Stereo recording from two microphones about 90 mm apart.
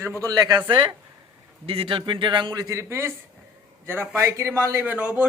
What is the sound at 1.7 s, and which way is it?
A man's voice, 80° right.